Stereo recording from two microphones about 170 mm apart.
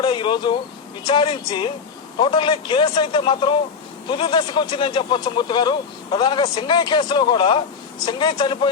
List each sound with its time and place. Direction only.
0.0 s speech: 30° left (ahead or behind)